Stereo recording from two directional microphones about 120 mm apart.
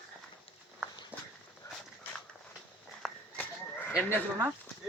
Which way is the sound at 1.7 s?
25° left (ahead or behind).